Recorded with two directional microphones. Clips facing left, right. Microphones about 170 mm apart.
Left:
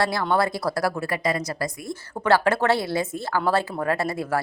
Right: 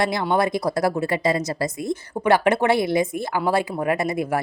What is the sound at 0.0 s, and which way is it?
Speech, 20° right (ahead or behind).